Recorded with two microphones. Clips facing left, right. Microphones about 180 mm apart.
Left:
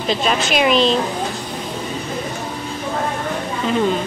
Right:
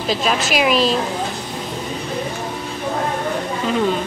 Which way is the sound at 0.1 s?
Centre (ahead or behind).